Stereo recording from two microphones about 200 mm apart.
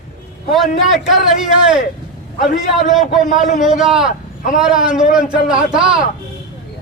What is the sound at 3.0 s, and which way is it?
Speech, 40° left (ahead or behind).